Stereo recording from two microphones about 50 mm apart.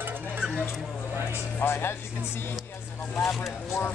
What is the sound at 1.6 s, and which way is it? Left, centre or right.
Speech, left.